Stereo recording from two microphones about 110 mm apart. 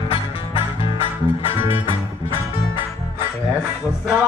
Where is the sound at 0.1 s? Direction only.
55° left (ahead or behind).